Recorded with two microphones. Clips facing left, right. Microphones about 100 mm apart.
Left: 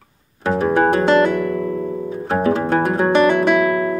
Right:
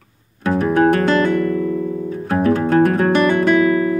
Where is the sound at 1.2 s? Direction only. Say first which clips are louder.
Right 1 dB; 10° left (ahead or behind).